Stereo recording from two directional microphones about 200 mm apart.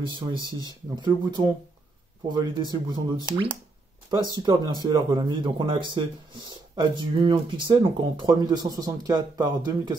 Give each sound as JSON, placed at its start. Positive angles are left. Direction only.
{"t": 0.0, "sound": "speech", "side_deg": -25}
{"t": 4.8, "sound": "speech", "side_deg": -20}